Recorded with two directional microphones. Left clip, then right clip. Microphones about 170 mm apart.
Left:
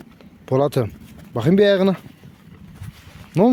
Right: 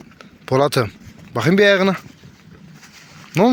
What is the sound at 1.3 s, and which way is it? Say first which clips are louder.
Speech: right 2 dB; 25° left (ahead or behind).